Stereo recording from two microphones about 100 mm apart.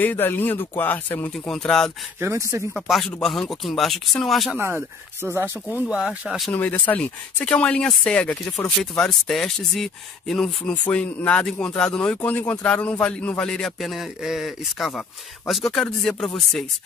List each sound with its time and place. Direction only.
0.0 s speech: 20° left (ahead or behind)
1.3 s a man's voice: 5° left (ahead or behind)
2.1 s speech: 30° right (ahead or behind)
2.7 s a man's voice: centre (ahead or behind)
4.6 s speech: 25° right (ahead or behind); by 6.5 s 5° right (ahead or behind)
6.5 s a man's voice: 15° left (ahead or behind)